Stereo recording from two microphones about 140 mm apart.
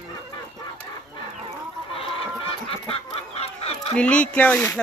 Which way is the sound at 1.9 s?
45° left (ahead or behind).